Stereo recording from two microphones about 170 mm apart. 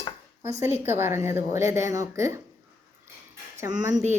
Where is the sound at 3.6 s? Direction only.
20° right (ahead or behind).